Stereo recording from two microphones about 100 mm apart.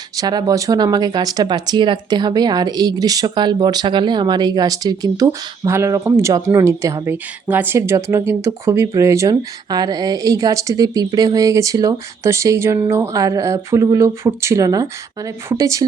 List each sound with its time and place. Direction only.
0.2 s speech: 40° right (ahead or behind); by 7.8 s 20° right (ahead or behind)
7.8 s speech: 30° right (ahead or behind)